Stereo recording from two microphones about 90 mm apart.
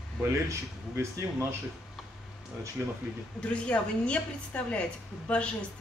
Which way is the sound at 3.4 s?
10° left (ahead or behind).